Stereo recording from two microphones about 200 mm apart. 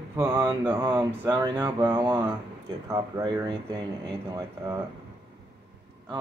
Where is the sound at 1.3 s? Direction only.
20° right (ahead or behind).